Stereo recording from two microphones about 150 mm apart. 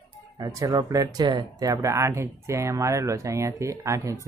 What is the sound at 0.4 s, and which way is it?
Speech, 25° right (ahead or behind).